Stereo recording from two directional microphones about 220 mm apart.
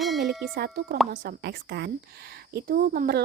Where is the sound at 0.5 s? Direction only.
45° right (ahead or behind).